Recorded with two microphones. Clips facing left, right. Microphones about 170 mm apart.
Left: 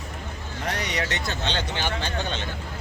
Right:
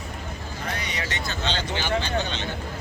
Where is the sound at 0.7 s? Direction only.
70° left (ahead or behind); by 2.4 s 55° left (ahead or behind).